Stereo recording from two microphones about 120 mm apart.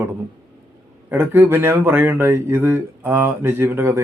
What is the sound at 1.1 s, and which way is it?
A man's voice, 15° right (ahead or behind).